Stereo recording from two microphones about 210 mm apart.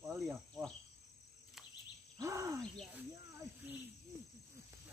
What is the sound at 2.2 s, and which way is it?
Speech, 15° right (ahead or behind).